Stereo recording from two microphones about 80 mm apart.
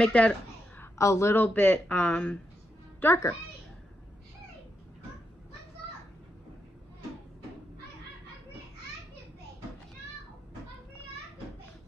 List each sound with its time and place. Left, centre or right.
0.0 s a woman's voice: centre
0.9 s speech: left
1.4 s speech: left
3.0 s a woman's voice: left